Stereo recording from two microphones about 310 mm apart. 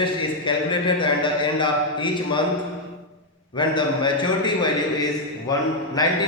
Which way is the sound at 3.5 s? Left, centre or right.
Centre.